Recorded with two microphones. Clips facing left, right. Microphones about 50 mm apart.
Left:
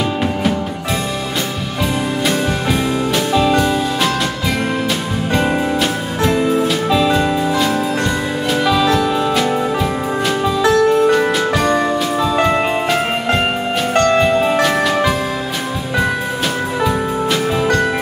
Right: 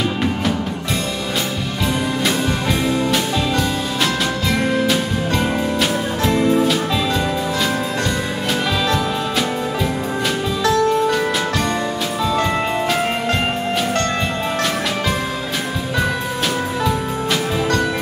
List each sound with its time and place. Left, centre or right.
3.3 s music: centre
5.8 s music: centre
10.6 s music: left
11.1 s music: centre
16.8 s music: centre